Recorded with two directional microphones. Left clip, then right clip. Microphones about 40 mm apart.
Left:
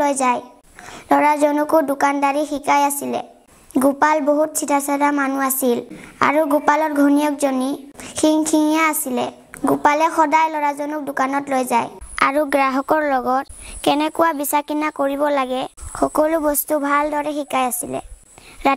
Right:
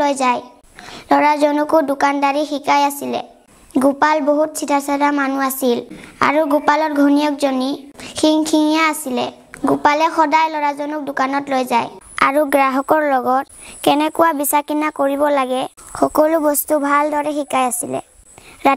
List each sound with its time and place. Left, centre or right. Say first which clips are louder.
0.0 s a woman's voice: right 2 dB; centre
3.7 s a woman's voice: right 2 dB; centre
4.3 s a woman's voice: right 1 dB; left; by 6.5 s centre
6.5 s a woman's voice: right 1 dB; centre
12.2 s a woman's voice: right 3 dB; right
15.0 s speech: right 4 dB; right
15.2 s a woman's voice: right 3 dB; right